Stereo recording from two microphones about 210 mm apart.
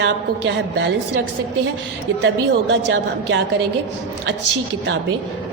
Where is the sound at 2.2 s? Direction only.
60° right (ahead or behind).